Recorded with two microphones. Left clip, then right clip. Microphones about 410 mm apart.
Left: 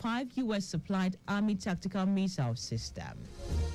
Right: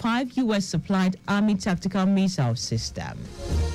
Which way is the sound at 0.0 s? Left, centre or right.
Centre.